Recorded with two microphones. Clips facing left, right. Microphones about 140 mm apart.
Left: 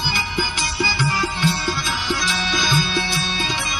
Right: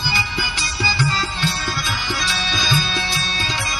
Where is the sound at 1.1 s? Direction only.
15° left (ahead or behind).